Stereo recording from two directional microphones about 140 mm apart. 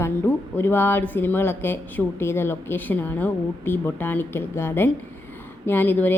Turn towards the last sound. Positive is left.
turn(degrees=15)  # may be behind; listen again after turning